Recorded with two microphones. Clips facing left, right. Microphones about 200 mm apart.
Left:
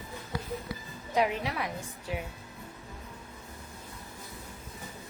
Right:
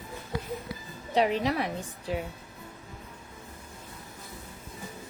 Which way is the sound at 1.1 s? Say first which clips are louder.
Right 4 dB; 30° right (ahead or behind).